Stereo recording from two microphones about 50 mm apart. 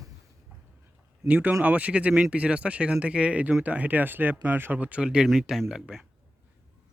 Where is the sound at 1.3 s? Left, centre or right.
Right.